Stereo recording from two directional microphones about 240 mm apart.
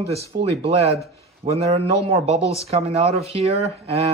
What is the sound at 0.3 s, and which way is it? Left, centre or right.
Speech, right.